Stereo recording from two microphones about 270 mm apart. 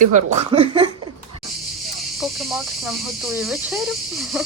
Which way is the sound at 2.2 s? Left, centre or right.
Centre.